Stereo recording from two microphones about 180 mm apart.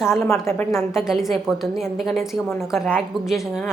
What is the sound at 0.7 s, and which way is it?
A woman's voice, centre (ahead or behind).